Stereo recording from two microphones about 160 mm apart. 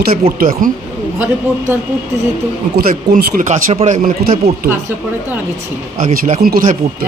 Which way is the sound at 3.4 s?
45° right (ahead or behind).